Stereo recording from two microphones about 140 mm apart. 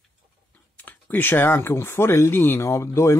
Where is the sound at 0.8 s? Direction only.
10° left (ahead or behind).